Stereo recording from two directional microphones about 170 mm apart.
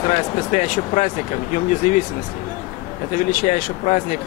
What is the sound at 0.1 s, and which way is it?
Speech, 45° left (ahead or behind).